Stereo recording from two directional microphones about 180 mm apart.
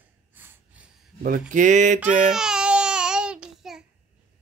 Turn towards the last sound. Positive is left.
turn(degrees=-5)  # may be behind; listen again after turning